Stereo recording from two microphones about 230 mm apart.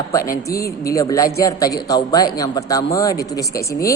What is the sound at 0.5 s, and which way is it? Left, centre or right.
Speech, left.